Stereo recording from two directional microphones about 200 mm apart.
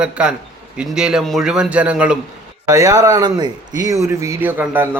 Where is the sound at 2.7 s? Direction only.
15° right (ahead or behind).